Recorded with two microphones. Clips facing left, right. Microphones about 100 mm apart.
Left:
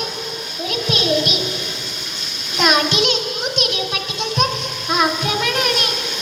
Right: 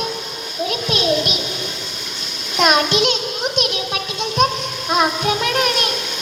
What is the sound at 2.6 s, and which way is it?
Child singing, 40° right (ahead or behind).